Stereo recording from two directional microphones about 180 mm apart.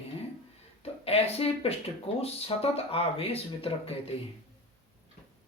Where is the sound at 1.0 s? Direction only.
35° left (ahead or behind).